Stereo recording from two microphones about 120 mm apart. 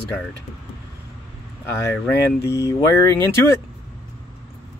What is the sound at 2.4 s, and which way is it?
Speech, 25° left (ahead or behind).